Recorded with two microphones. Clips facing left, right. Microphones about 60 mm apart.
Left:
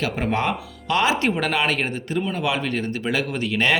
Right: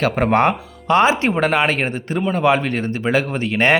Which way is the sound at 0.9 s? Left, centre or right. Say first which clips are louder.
Right 5 dB; right.